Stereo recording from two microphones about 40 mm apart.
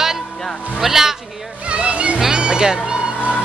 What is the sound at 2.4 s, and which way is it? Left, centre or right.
Speech, centre.